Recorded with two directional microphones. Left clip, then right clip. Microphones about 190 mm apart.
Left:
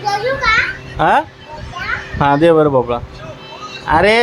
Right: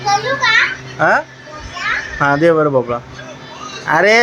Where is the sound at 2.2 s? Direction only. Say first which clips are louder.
Left 2 dB; 15° left (ahead or behind).